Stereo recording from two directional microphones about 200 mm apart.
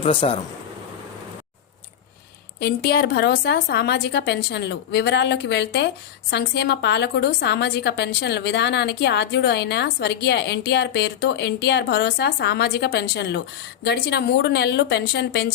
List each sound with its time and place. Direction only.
0.0 s speech: 30° left (ahead or behind)
2.6 s a woman's voice: 50° left (ahead or behind)